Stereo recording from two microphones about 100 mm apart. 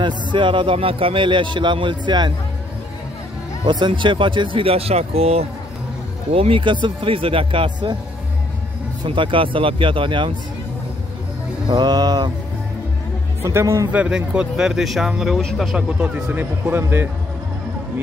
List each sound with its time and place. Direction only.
0.0 s a man's voice: 55° right (ahead or behind)
3.6 s a man's voice: 55° right (ahead or behind); by 5.5 s 90° right
6.3 s a man's voice: 65° right (ahead or behind)
9.0 s a man's voice: 55° right (ahead or behind)
11.7 s mantra: 45° right (ahead or behind)
13.4 s speech: 25° right (ahead or behind)
13.9 s speech: 10° right (ahead or behind)
16.7 s speech: 25° right (ahead or behind)